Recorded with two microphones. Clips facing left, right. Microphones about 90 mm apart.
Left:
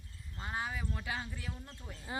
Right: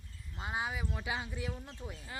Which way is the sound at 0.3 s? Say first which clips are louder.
Right 2 dB; 15° right (ahead or behind).